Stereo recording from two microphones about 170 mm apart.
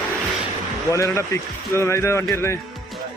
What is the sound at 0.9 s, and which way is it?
Speech, 15° left (ahead or behind).